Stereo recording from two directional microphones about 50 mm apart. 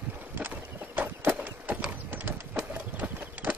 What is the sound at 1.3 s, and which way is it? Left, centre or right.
Clip-clop, right.